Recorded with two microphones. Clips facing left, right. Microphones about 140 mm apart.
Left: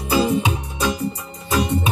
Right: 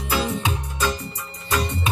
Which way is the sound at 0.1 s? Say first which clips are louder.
Left 6 dB; 15° left (ahead or behind).